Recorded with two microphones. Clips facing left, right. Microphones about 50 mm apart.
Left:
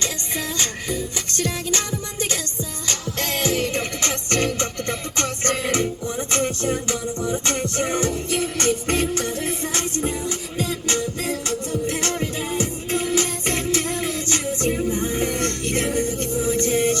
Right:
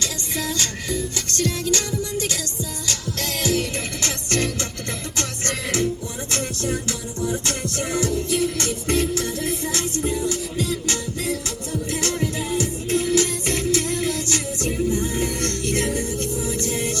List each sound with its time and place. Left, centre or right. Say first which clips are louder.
0.0 s music: even; left
2.8 s music: left 3 dB; left